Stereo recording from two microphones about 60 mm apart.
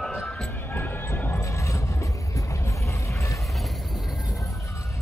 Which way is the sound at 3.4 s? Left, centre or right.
Centre.